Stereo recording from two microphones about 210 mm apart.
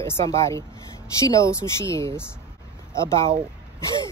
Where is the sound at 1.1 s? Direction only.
15° left (ahead or behind).